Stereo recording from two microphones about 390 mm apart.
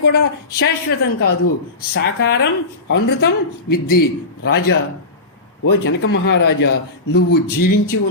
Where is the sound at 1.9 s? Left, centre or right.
Left.